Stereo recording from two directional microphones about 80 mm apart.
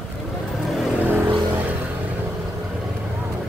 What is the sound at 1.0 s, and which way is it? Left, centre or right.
Vehicle, right.